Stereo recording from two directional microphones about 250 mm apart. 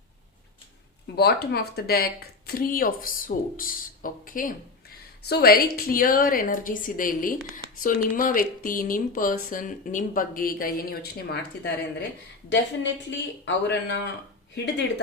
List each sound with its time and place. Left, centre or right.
1.0 s a woman's voice: left